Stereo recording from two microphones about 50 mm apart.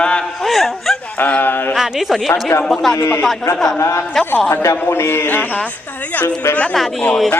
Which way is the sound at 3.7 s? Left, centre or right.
Left.